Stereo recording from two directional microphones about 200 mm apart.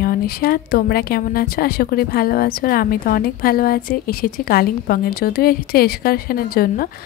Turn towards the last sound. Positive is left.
turn(degrees=45)  # may be behind; listen again after turning